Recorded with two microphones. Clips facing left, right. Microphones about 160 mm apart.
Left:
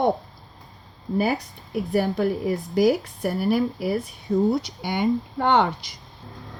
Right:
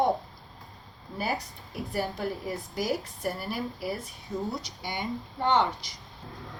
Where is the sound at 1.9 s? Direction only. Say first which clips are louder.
Left 9 dB; 60° left (ahead or behind).